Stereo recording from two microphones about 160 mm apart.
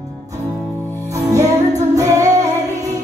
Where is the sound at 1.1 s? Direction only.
20° right (ahead or behind).